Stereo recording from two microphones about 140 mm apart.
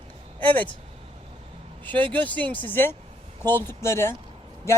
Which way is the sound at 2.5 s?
15° left (ahead or behind).